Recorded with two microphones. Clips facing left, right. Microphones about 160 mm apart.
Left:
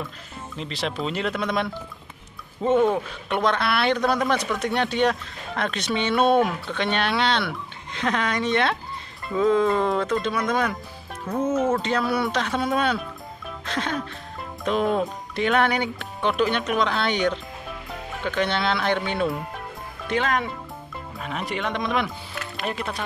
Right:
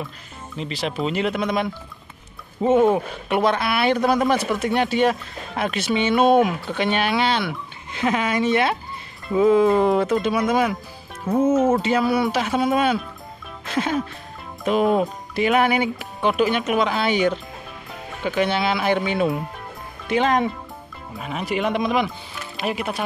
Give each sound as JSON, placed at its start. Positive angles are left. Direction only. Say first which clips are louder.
{"t": 0.6, "sound": "speech", "louder": "right 3 dB", "side_deg": -5}
{"t": 2.9, "sound": "speech", "louder": "right 4 dB", "side_deg": -5}
{"t": 20.2, "sound": "speech", "louder": "right 5 dB", "side_deg": -20}
{"t": 21.2, "sound": "speech", "louder": "right 5 dB", "side_deg": -5}